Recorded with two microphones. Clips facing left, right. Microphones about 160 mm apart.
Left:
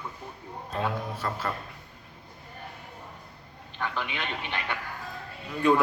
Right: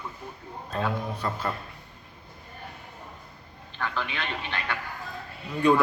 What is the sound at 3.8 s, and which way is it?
Speech, 15° left (ahead or behind).